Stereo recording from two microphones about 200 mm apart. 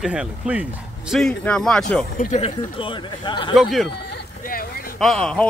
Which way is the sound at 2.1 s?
35° left (ahead or behind).